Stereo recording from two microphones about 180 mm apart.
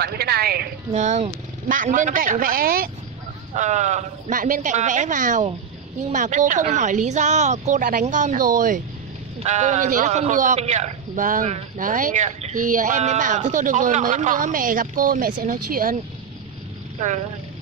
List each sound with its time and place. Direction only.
0.0 s a sound: 60° right (ahead or behind)
0.9 s a man's voice: 40° right (ahead or behind)
3.5 s a man's voice: 40° right (ahead or behind)